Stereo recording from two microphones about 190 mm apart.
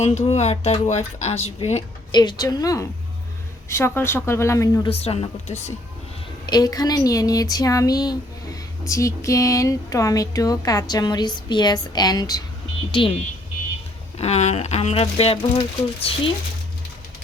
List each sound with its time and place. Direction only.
0.0 s speech: 35° left (ahead or behind)
2.1 s a woman's voice: 20° left (ahead or behind)
4.9 s speech: 30° left (ahead or behind)
6.4 s speech: 20° left (ahead or behind)
14.2 s speech: 35° left (ahead or behind)